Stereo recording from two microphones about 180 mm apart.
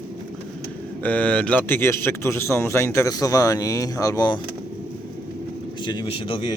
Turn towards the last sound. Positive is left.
turn(degrees=30)  # may be behind; listen again after turning